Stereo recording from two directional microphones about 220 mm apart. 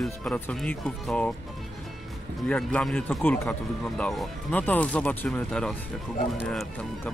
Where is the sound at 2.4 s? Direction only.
5° left (ahead or behind).